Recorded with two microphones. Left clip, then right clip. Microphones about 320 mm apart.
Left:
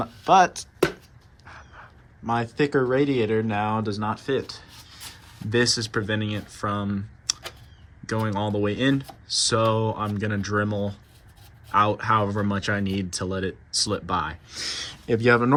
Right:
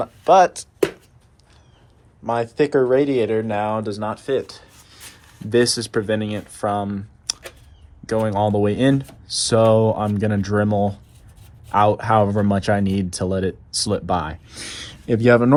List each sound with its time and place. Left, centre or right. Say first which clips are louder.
0.0 s speech: right 4 dB; centre
2.2 s speech: right 5 dB; centre